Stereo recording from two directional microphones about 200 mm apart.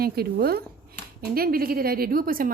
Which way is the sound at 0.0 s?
50° right (ahead or behind).